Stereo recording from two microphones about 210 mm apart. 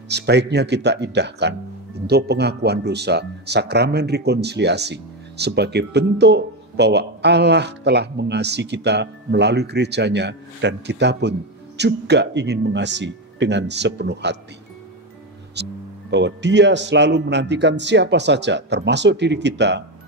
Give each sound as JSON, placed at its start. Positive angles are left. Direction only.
{"t": 0.1, "sound": "speech", "side_deg": -55}
{"t": 15.6, "sound": "a man's voice", "side_deg": -55}